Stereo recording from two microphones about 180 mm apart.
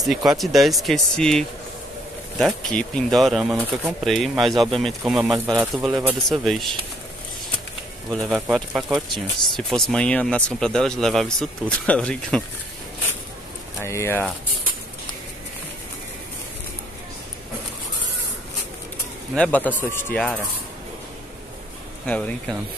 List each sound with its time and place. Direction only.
0.0 s speech: centre (ahead or behind)
5.8 s speech: 25° right (ahead or behind)
6.2 s speech: centre (ahead or behind)
8.1 s speech: centre (ahead or behind)
13.7 s speech: 15° left (ahead or behind)
19.3 s speech: 5° left (ahead or behind)
22.0 s speech: 10° left (ahead or behind)